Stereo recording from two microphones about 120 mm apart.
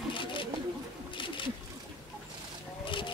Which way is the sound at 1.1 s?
45° left (ahead or behind).